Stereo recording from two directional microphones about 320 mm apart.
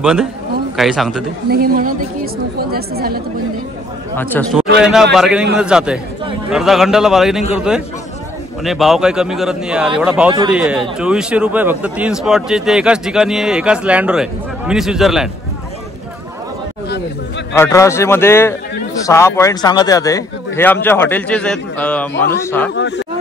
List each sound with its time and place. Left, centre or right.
0.0 s speech: centre
1.5 s a woman's voice: right
4.2 s speech: centre
17.6 s a man's voice: centre
22.8 s speech: left